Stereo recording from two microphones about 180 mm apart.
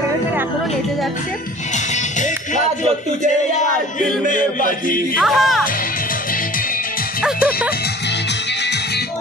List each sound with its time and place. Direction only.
2.1 s music: 45° left (ahead or behind)
4.3 s music: 50° left (ahead or behind)
5.2 s speech: centre (ahead or behind)